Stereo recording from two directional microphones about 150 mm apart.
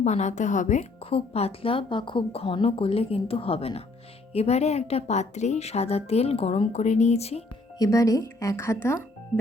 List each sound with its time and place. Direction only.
0.0 s a woman's voice: 50° left (ahead or behind)
1.1 s a woman's voice: 40° left (ahead or behind)
7.8 s speech: 20° left (ahead or behind)